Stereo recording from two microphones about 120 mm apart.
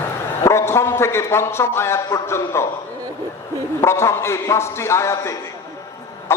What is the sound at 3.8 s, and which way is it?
A man's voice, 25° left (ahead or behind).